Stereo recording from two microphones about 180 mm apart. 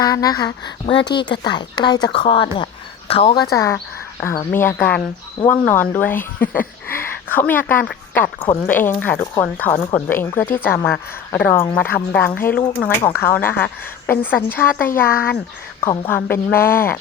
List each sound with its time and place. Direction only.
0.0 s a woman's voice: 20° left (ahead or behind)
3.5 s a woman's voice: 15° left (ahead or behind)
14.8 s speech: 50° left (ahead or behind)
16.0 s a woman's voice: 10° left (ahead or behind)